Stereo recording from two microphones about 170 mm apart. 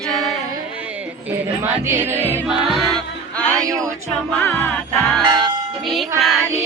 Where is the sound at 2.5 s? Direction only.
Centre (ahead or behind).